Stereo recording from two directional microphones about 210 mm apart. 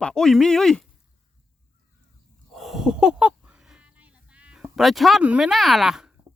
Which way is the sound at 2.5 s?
Centre (ahead or behind).